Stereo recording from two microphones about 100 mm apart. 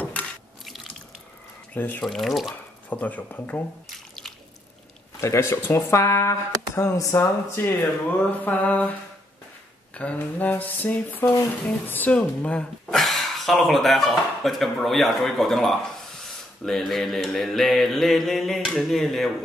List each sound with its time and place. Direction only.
0.0 s drip: 15° left (ahead or behind)
1.7 s speech: 20° left (ahead or behind)
2.0 s a sound: centre (ahead or behind)
2.9 s speech: 15° left (ahead or behind)
5.2 s speech: 30° left (ahead or behind)
9.9 s a sound: 15° left (ahead or behind)